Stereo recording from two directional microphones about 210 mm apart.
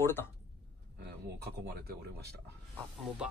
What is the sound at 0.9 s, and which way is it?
Speech, 50° right (ahead or behind).